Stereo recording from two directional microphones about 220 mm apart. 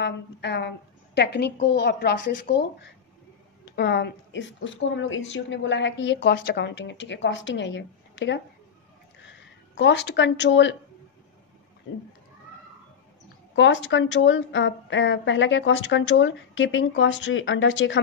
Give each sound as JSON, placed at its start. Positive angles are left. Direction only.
{"t": 0.0, "sound": "a woman's voice", "side_deg": 50}
{"t": 9.2, "sound": "speech", "side_deg": 55}
{"t": 13.6, "sound": "a woman's voice", "side_deg": 55}